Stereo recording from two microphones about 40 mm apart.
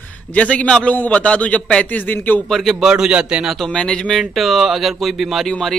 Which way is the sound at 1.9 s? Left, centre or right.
Left.